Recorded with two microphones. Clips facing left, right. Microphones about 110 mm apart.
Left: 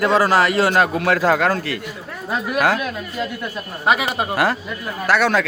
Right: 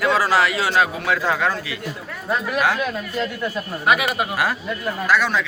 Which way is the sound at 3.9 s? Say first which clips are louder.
Left 1 dB; 30° left (ahead or behind).